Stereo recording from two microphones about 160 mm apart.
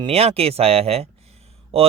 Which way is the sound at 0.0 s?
40° right (ahead or behind).